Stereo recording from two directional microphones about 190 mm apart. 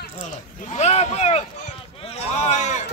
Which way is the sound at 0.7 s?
35° left (ahead or behind).